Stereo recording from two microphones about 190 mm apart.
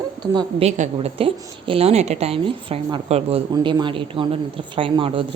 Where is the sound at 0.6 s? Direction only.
35° right (ahead or behind).